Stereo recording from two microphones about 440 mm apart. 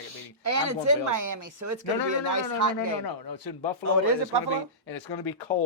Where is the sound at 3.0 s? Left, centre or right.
Left.